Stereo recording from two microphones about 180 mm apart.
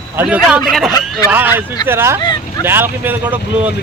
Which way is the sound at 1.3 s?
10° right (ahead or behind).